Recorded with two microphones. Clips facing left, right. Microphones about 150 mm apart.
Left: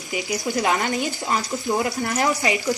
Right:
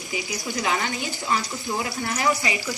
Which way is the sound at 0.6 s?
45° left (ahead or behind).